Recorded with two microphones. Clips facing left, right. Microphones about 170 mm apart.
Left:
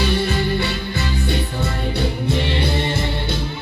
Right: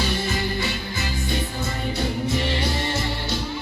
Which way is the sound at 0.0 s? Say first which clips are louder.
Left 5 dB; 60° left (ahead or behind).